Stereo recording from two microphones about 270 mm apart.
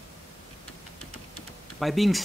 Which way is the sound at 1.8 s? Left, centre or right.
Centre.